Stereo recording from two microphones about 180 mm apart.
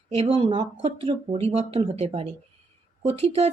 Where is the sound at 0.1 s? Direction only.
30° right (ahead or behind).